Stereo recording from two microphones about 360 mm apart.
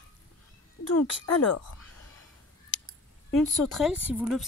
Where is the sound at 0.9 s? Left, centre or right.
Left.